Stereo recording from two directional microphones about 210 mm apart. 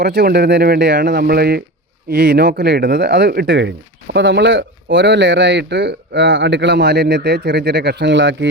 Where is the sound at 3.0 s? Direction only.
55° right (ahead or behind).